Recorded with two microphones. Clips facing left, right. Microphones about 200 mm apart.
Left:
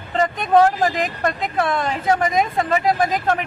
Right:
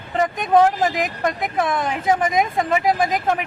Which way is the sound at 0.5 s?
Centre (ahead or behind).